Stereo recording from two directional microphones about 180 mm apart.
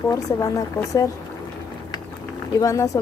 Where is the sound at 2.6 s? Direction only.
15° left (ahead or behind).